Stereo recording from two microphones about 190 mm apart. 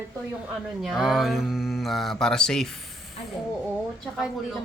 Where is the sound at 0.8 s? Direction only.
Centre (ahead or behind).